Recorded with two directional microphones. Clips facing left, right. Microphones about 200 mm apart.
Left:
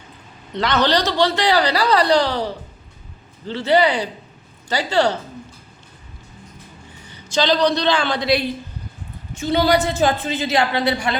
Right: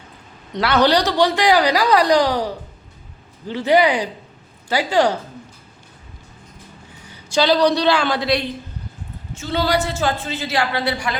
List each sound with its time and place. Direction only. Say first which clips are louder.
0.5 s a woman's voice: right 2 dB; 10° right (ahead or behind)
7.1 s a man's voice: right 2 dB; 10° right (ahead or behind)
9.3 s a woman's voice: left 3 dB; 15° left (ahead or behind)